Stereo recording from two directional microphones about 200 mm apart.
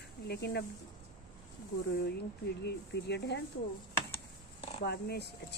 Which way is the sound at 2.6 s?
55° left (ahead or behind).